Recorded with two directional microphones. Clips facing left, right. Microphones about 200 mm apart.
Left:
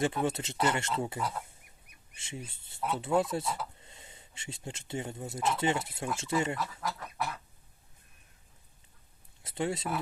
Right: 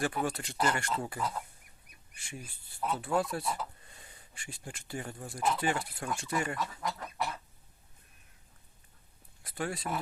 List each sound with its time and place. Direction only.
0.3 s speech: 20° left (ahead or behind)
6.6 s speech: 5° left (ahead or behind)
9.4 s speech: 25° left (ahead or behind)